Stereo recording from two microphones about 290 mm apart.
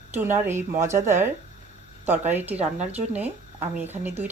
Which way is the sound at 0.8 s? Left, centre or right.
Right.